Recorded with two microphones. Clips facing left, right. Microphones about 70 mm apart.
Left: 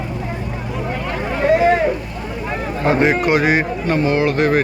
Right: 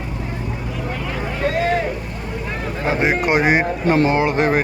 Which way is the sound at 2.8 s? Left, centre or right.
Centre.